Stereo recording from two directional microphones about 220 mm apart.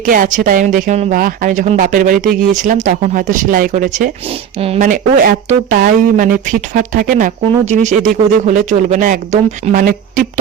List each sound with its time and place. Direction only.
0.0 s speech: 40° right (ahead or behind)